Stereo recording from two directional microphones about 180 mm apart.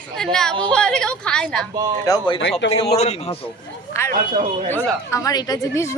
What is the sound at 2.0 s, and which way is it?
Speech, 25° left (ahead or behind).